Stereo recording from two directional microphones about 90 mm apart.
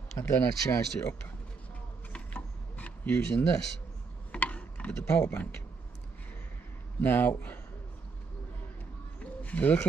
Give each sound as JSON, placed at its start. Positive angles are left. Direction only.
{"t": 0.2, "sound": "speech", "side_deg": 30}
{"t": 2.1, "sound": "mechanisms", "side_deg": 15}
{"t": 7.0, "sound": "speech", "side_deg": 20}
{"t": 9.2, "sound": "a sound", "side_deg": 15}